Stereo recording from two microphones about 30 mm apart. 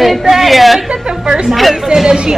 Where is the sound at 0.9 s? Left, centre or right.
Right.